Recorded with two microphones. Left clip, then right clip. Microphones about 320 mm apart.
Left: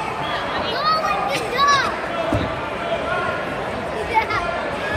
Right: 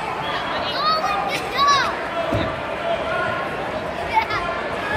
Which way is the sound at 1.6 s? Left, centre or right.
Centre.